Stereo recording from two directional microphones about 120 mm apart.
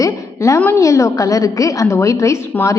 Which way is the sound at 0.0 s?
25° left (ahead or behind).